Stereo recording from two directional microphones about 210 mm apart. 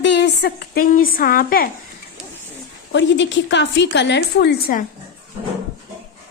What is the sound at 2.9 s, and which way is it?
A woman's voice, 60° left (ahead or behind).